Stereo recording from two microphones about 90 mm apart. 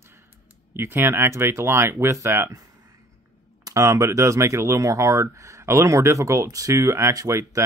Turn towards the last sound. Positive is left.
turn(degrees=-40)  # may be behind; listen again after turning